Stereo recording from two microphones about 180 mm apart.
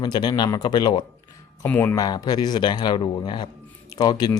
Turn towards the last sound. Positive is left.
turn(degrees=20)  # may be behind; listen again after turning